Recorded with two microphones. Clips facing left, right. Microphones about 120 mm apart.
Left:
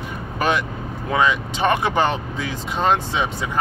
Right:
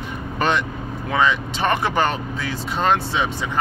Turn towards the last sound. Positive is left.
turn(degrees=15)  # may be behind; listen again after turning